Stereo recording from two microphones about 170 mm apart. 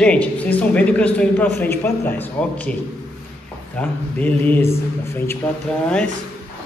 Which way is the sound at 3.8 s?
10° left (ahead or behind).